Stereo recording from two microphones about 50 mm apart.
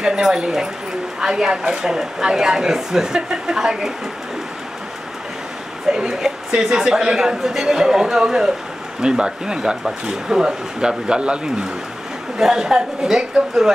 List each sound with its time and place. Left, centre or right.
0.0 s speech: centre
5.9 s speech: centre